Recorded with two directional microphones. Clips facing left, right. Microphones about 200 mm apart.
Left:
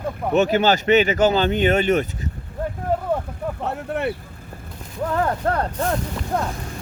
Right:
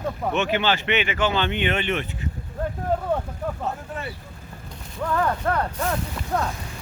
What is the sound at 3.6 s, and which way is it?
Speech, 65° left (ahead or behind).